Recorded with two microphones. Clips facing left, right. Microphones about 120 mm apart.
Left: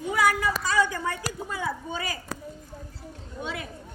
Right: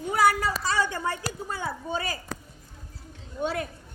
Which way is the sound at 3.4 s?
45° right (ahead or behind).